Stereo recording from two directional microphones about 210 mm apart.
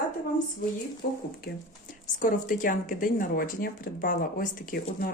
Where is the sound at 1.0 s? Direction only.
45° left (ahead or behind).